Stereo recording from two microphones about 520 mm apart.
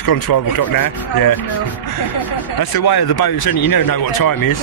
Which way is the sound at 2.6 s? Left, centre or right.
Left.